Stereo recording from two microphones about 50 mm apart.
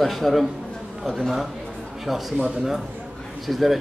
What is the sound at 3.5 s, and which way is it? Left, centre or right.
Speech, centre.